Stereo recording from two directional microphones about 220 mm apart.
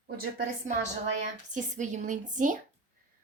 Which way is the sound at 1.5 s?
35° right (ahead or behind).